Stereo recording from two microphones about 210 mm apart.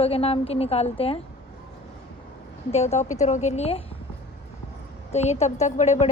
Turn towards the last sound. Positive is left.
turn(degrees=35)  # may be behind; listen again after turning